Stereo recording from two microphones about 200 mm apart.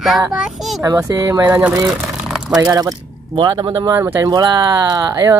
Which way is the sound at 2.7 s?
20° right (ahead or behind).